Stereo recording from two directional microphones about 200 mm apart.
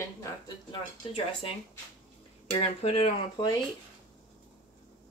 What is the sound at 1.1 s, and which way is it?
Speech, 30° left (ahead or behind).